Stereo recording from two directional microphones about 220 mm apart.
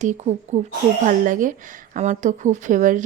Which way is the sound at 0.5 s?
35° right (ahead or behind).